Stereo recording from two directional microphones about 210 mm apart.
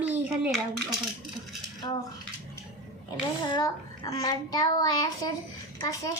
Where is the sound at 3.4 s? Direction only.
20° left (ahead or behind).